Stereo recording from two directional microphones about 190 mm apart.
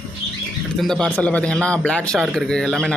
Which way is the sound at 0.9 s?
5° left (ahead or behind).